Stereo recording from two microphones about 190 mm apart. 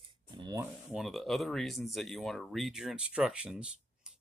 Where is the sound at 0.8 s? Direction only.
Centre (ahead or behind).